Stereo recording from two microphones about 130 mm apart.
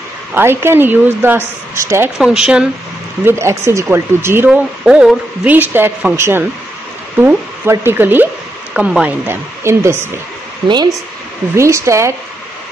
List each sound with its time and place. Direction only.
0.3 s a woman's voice: 20° right (ahead or behind)
2.1 s speech: 5° right (ahead or behind)
3.3 s speech: 20° right (ahead or behind)
4.8 s a woman's voice: 10° right (ahead or behind)
11.5 s speech: 20° right (ahead or behind)